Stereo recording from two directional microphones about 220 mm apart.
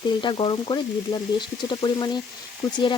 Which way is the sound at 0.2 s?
20° left (ahead or behind).